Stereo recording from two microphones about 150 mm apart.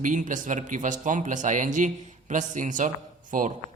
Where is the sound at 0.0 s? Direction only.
60° right (ahead or behind).